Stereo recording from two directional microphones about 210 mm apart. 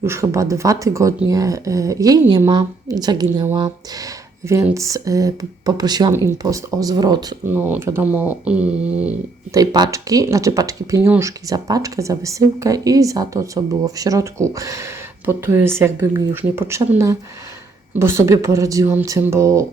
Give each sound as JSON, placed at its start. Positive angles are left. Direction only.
{"t": 0.0, "sound": "speech", "side_deg": -10}
{"t": 9.6, "sound": "speech", "side_deg": -20}